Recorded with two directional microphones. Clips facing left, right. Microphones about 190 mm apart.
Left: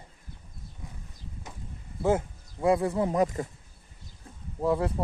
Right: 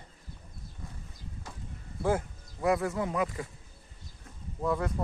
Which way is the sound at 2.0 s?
25° left (ahead or behind).